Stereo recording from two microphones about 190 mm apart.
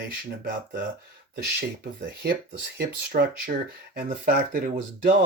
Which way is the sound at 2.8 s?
55° right (ahead or behind).